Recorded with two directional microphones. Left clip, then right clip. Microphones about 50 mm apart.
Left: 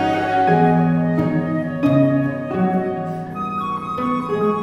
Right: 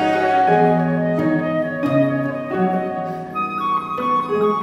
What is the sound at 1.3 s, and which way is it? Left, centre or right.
Music, centre.